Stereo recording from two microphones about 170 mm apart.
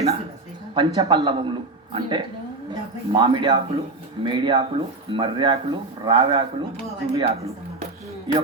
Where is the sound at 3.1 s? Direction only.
30° right (ahead or behind).